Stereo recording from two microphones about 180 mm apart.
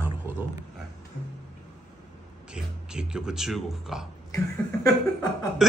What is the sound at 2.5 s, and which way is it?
A man's voice, 5° right (ahead or behind).